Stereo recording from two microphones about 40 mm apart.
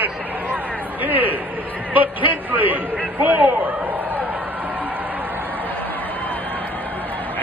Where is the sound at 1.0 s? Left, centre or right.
Right.